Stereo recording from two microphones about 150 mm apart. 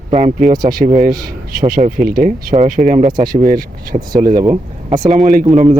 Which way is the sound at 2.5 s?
50° right (ahead or behind).